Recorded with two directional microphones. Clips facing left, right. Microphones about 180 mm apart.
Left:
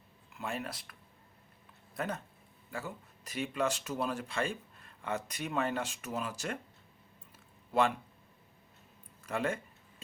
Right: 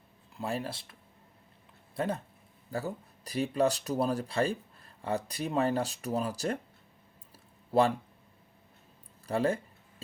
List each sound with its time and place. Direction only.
0.3 s speech: 35° right (ahead or behind)
2.0 s speech: 30° right (ahead or behind)
7.7 s speech: 35° right (ahead or behind)
9.2 s speech: 35° right (ahead or behind)